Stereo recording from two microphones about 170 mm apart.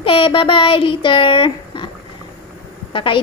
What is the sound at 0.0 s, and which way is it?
Speech, 30° left (ahead or behind).